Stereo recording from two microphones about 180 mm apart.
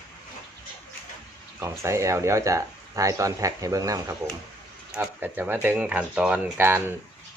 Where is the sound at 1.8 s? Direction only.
15° right (ahead or behind).